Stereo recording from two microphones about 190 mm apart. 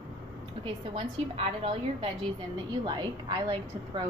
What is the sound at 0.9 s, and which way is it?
A woman's voice, 30° right (ahead or behind).